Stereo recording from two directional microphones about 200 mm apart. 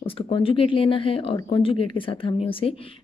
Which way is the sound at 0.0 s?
25° left (ahead or behind).